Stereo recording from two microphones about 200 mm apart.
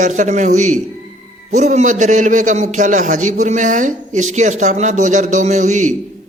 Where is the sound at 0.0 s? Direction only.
40° right (ahead or behind).